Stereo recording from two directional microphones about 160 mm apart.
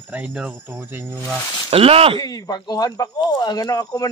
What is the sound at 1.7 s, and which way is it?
Speech, 35° right (ahead or behind).